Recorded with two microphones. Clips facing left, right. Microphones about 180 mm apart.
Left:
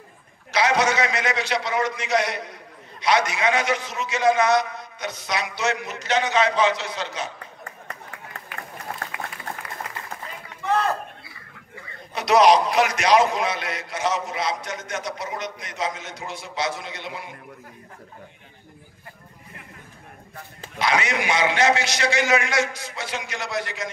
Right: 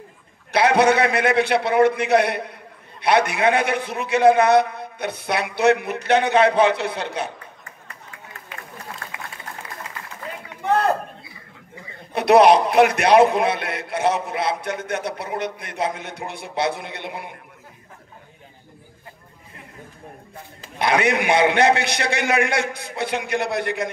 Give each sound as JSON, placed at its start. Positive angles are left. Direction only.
{"t": 0.5, "sound": "a man's voice", "side_deg": -60}
{"t": 8.9, "sound": "applause", "side_deg": 55}
{"t": 10.7, "sound": "a sound", "side_deg": -60}
{"t": 12.1, "sound": "a man's voice", "side_deg": -60}
{"t": 20.8, "sound": "a man's voice", "side_deg": -60}